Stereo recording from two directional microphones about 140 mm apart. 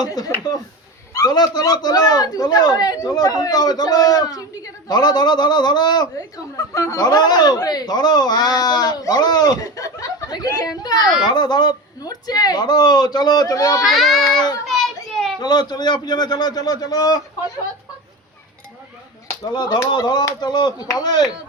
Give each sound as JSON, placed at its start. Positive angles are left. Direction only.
{"t": 0.0, "sound": "a man's voice", "side_deg": 30}
{"t": 13.8, "sound": "a child's voice", "side_deg": 0}
{"t": 14.3, "sound": "a man's voice", "side_deg": 30}
{"t": 14.7, "sound": "children playing", "side_deg": 0}
{"t": 15.4, "sound": "a man's voice", "side_deg": 30}
{"t": 19.5, "sound": "a man's voice", "side_deg": 30}